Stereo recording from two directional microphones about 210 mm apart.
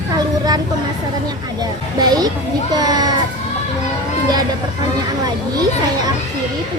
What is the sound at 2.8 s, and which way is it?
Speech, 20° right (ahead or behind).